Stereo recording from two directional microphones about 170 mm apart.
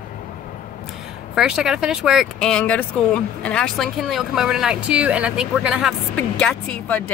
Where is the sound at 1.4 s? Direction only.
5° right (ahead or behind).